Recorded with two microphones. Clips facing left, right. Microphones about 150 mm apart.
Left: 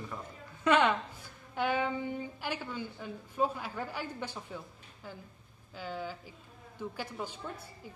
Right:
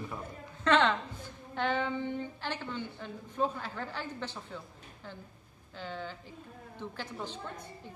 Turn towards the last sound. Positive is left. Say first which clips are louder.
# even
turn(degrees=10)  # may be behind; listen again after turning